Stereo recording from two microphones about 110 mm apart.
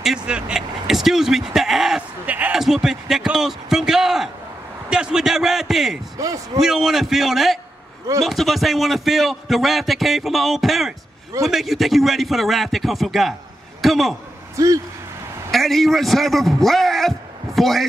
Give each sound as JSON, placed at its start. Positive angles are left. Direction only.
{"t": 0.0, "sound": "speech", "side_deg": -5}
{"t": 2.2, "sound": "speech", "side_deg": -15}
{"t": 2.5, "sound": "speech", "side_deg": -5}
{"t": 6.1, "sound": "speech", "side_deg": -30}
{"t": 6.6, "sound": "a man's voice", "side_deg": -5}
{"t": 15.5, "sound": "a man's voice", "side_deg": 0}